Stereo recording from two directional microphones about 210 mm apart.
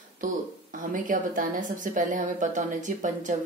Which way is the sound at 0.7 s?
40° right (ahead or behind).